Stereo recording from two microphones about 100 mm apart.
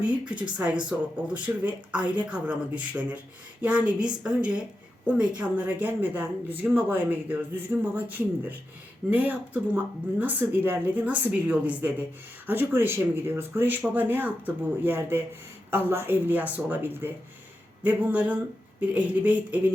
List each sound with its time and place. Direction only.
0.5 s speech: 10° right (ahead or behind)